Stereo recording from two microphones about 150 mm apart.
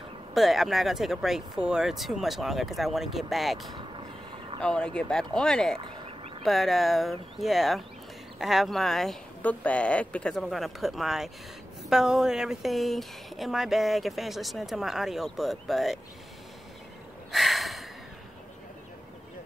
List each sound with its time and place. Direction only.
0.3 s speech: centre (ahead or behind)
3.7 s vehicle: 35° right (ahead or behind)
4.6 s speech: 5° left (ahead or behind)
5.8 s fowl: 35° right (ahead or behind)
6.4 s speech: centre (ahead or behind)
17.3 s a sound: centre (ahead or behind)